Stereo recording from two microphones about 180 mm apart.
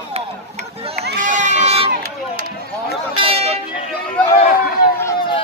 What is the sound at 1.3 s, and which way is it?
Run, 40° right (ahead or behind).